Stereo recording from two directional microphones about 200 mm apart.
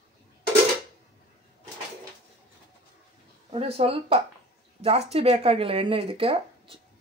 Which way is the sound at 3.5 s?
30° right (ahead or behind).